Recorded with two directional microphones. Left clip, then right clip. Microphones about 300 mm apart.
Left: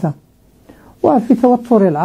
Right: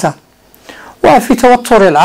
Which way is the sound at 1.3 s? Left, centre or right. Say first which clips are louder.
Right 6 dB; centre.